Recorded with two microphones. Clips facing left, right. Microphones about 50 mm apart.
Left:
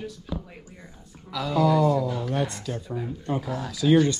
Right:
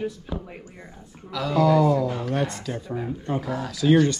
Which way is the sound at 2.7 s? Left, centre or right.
Centre.